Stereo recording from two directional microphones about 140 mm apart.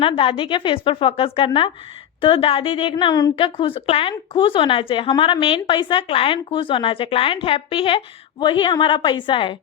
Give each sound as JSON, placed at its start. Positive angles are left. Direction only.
{"t": 0.0, "sound": "a woman's voice", "side_deg": 40}